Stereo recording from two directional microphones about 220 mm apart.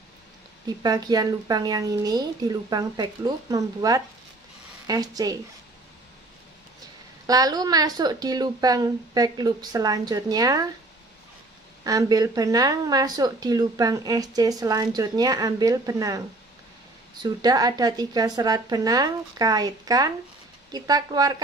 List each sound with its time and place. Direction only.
0.7 s speech: 20° right (ahead or behind)
7.2 s speech: 15° right (ahead or behind)
11.8 s speech: 15° right (ahead or behind)
17.2 s speech: 15° right (ahead or behind)